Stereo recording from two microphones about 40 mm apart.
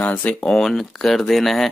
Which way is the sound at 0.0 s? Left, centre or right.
Left.